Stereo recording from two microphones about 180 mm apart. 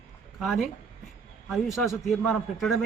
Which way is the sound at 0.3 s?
Centre (ahead or behind).